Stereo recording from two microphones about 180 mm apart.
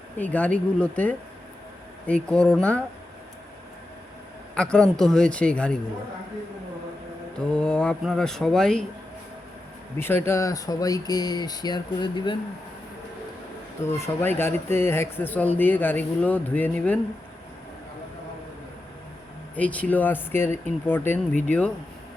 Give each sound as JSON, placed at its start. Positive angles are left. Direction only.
{"t": 0.2, "sound": "speech", "side_deg": 10}
{"t": 4.5, "sound": "speech", "side_deg": 5}
{"t": 7.3, "sound": "speech", "side_deg": 5}
{"t": 10.0, "sound": "speech", "side_deg": 10}
{"t": 13.9, "sound": "speech", "side_deg": 10}
{"t": 19.5, "sound": "speech", "side_deg": 10}